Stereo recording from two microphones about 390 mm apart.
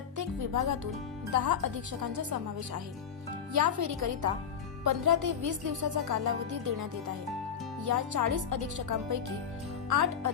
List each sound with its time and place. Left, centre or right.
0.2 s speech: right
3.5 s speech: right
7.9 s speech: right